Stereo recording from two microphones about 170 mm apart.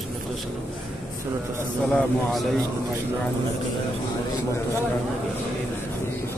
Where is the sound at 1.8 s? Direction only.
5° left (ahead or behind).